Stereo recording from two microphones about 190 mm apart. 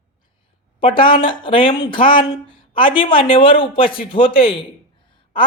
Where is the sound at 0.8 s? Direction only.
25° left (ahead or behind).